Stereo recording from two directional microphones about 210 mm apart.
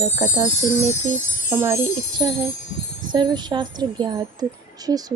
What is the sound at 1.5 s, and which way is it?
Speech, 10° right (ahead or behind).